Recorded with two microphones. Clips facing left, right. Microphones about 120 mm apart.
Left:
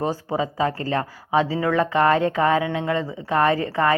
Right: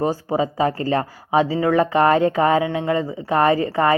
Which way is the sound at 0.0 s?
10° right (ahead or behind).